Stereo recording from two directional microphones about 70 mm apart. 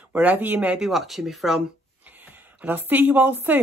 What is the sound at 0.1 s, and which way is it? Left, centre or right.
Speech, right.